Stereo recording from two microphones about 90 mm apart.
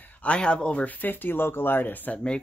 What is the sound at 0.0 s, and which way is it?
Speech, 15° left (ahead or behind).